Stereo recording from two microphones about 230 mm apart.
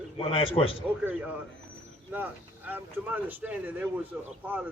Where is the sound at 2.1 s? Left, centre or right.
Centre.